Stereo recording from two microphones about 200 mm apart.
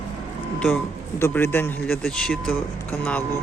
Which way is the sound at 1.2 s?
10° left (ahead or behind).